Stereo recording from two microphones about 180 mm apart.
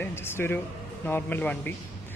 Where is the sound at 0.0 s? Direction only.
15° left (ahead or behind).